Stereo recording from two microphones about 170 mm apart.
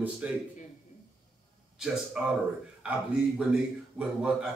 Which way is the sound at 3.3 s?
5° right (ahead or behind).